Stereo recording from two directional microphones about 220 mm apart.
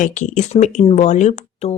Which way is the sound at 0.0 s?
35° left (ahead or behind).